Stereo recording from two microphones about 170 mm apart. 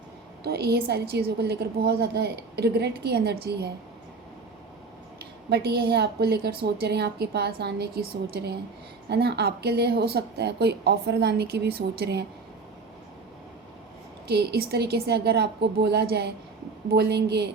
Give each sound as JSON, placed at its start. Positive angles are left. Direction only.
{"t": 0.4, "sound": "a woman's voice", "side_deg": -70}
{"t": 5.2, "sound": "a woman's voice", "side_deg": -70}
{"t": 14.3, "sound": "a woman's voice", "side_deg": -70}